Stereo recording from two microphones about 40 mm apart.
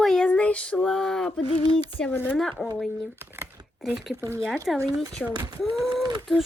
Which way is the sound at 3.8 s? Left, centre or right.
Centre.